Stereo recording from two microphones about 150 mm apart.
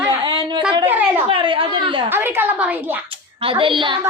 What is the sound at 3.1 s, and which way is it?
Speech, 35° right (ahead or behind).